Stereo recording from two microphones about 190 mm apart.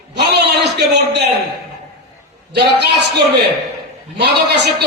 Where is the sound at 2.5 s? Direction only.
60° right (ahead or behind).